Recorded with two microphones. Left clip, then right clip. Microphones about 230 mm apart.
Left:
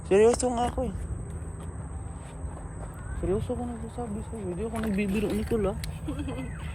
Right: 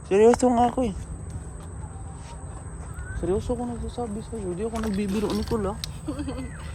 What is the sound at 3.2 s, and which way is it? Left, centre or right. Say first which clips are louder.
Speech: right 3 dB; centre.